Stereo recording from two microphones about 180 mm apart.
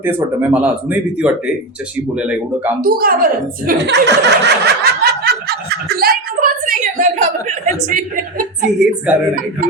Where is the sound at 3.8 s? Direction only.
70° right (ahead or behind); by 8.7 s 50° right (ahead or behind).